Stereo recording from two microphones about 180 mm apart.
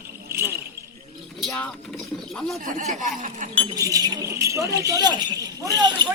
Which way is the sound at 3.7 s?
20° right (ahead or behind).